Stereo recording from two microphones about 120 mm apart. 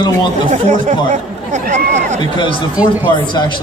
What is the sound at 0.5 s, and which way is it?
Speech, 90° right.